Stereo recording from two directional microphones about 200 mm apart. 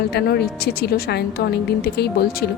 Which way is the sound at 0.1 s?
55° left (ahead or behind).